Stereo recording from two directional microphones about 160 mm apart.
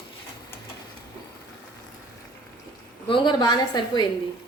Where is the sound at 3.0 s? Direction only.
30° left (ahead or behind).